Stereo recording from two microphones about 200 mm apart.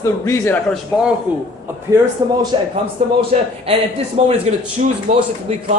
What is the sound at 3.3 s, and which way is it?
Speech, 35° right (ahead or behind).